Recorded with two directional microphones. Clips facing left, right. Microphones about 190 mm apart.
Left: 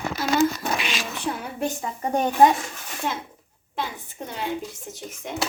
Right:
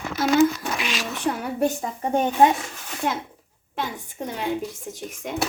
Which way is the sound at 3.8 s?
45° right (ahead or behind).